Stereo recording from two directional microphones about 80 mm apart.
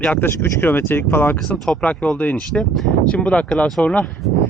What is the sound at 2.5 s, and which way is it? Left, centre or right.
Speech, centre.